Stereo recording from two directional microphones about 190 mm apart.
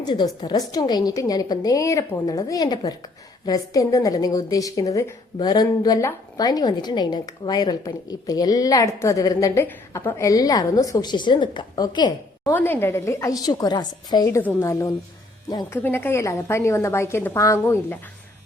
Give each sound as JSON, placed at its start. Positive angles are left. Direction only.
{"t": 0.0, "sound": "a woman's voice", "side_deg": 25}
{"t": 12.5, "sound": "a woman's voice", "side_deg": 10}